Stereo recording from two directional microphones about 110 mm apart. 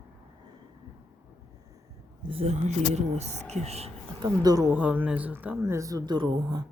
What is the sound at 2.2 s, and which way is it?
Speech, 60° right (ahead or behind).